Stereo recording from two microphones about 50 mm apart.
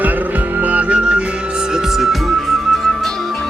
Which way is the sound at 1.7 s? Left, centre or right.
Centre.